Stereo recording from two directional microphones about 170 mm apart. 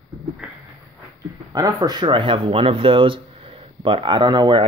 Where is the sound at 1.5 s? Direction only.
20° right (ahead or behind).